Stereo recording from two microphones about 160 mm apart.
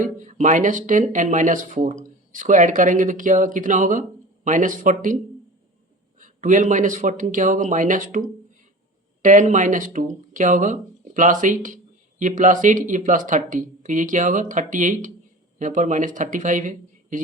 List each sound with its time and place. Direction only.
0.0 s speech: 50° right (ahead or behind)
6.1 s speech: 55° right (ahead or behind)
9.2 s speech: 50° right (ahead or behind)